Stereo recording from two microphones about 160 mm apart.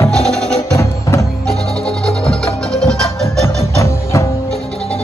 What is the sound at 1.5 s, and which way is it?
Music, 5° left (ahead or behind).